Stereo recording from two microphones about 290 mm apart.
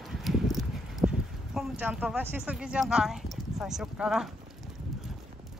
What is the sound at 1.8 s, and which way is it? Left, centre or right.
Speech, centre.